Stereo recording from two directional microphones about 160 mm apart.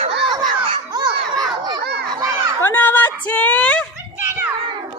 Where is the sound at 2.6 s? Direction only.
15° left (ahead or behind).